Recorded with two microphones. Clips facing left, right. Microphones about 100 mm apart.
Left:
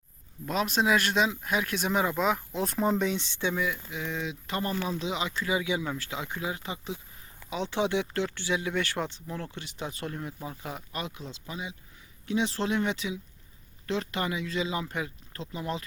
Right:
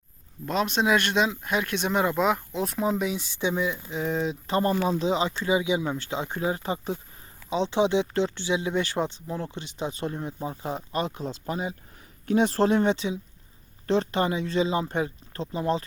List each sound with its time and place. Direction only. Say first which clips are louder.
0.4 s speech: right 2 dB; centre (ahead or behind); by 3.8 s 20° right (ahead or behind)
3.8 s speech: right 7 dB; 35° right (ahead or behind)
5.4 s speech: right 5 dB; 25° right (ahead or behind); by 7.0 s 40° right (ahead or behind)
7.5 s speech: right 5 dB; 20° right (ahead or behind)